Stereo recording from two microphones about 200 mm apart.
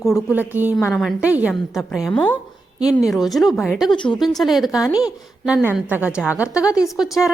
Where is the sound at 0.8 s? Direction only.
10° left (ahead or behind).